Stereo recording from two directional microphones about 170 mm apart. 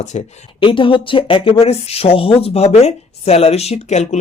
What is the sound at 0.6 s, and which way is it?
Speech, 30° left (ahead or behind).